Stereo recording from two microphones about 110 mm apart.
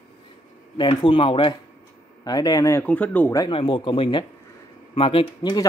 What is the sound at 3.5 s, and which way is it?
Speech, 50° left (ahead or behind).